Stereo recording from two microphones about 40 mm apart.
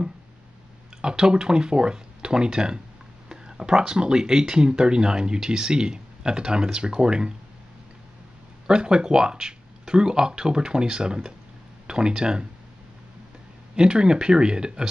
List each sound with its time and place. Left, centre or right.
1.0 s speech: right
8.6 s speech: centre
13.7 s speech: right